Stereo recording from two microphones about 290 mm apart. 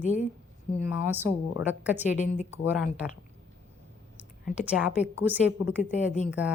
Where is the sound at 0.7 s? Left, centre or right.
Centre.